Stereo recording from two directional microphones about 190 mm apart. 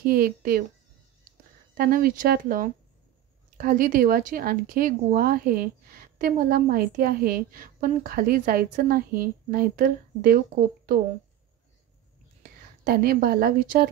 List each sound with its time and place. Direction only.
0.0 s speech: 50° right (ahead or behind)
1.8 s speech: 50° right (ahead or behind)
12.8 s speech: 55° right (ahead or behind)